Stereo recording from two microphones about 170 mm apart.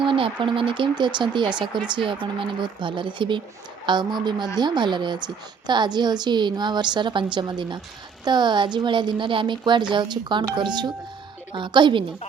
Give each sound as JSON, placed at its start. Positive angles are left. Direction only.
{"t": 0.0, "sound": "a woman's voice", "side_deg": -30}